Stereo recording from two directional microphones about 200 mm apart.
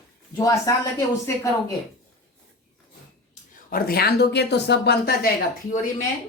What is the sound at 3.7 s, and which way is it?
Speech, 50° left (ahead or behind).